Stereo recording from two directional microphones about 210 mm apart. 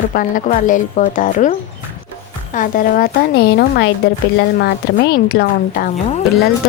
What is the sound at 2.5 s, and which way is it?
A woman's voice, 40° left (ahead or behind).